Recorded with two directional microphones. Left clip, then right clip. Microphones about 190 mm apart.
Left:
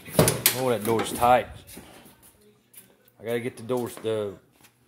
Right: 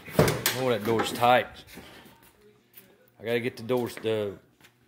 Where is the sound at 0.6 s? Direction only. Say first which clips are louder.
Even; 5° left (ahead or behind).